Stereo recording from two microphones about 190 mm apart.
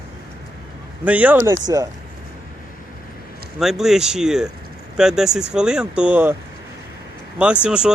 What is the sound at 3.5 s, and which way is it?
Speech, centre (ahead or behind).